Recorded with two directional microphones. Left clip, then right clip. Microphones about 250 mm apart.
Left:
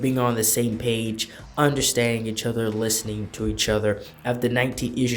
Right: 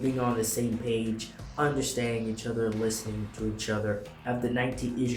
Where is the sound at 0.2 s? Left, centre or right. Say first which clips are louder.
Left 6 dB; left.